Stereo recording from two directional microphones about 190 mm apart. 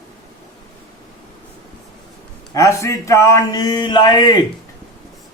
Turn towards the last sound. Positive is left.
turn(degrees=25)  # may be behind; listen again after turning